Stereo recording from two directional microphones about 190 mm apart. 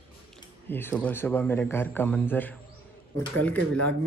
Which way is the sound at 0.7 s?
10° left (ahead or behind).